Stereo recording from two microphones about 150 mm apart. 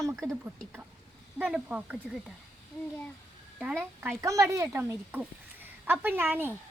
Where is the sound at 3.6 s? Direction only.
10° right (ahead or behind).